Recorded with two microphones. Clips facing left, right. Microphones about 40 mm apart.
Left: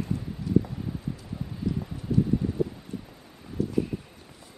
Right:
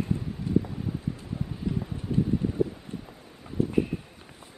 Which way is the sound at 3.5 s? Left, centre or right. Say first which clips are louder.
Right 2 dB; right.